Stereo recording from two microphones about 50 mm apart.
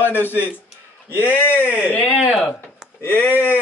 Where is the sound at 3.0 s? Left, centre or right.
Left.